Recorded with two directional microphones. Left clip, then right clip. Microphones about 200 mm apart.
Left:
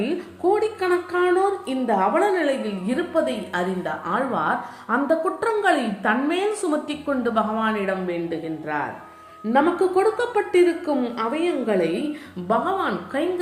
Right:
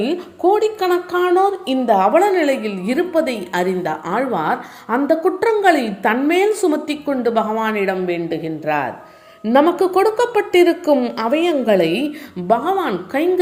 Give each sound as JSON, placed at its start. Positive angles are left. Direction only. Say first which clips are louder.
{"t": 0.0, "sound": "a woman's voice", "louder": "right 6 dB", "side_deg": -35}
{"t": 12.5, "sound": "speech", "louder": "right 5 dB", "side_deg": -40}